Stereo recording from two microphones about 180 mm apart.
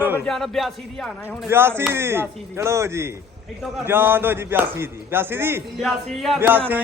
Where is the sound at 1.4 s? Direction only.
10° right (ahead or behind).